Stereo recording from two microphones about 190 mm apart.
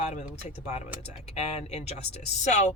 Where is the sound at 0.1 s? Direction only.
35° left (ahead or behind).